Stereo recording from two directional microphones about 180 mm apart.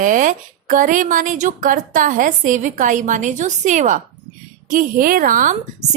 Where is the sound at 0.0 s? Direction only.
45° right (ahead or behind).